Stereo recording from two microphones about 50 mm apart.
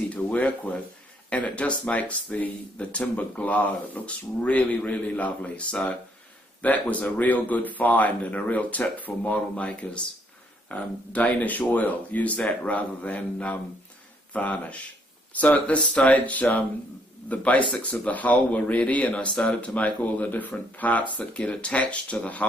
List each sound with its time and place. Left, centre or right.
0.1 s speech: left